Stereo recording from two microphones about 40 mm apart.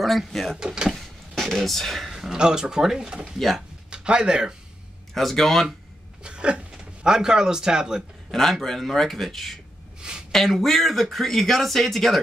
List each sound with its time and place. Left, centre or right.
0.0 s speech: centre
0.6 s speech: right
0.9 s a sound: centre
2.0 s speech: centre
3.3 s speech: centre
3.9 s speech: right
5.1 s speech: centre
6.2 s a sound: right
7.1 s speech: centre
8.3 s speech: centre
9.9 s a sound: right
10.3 s speech: centre